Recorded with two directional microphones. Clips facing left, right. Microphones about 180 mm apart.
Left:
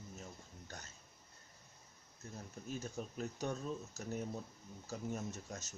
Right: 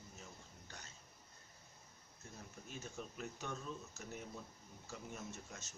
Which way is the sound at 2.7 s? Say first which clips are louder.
Left 6 dB; 40° left (ahead or behind).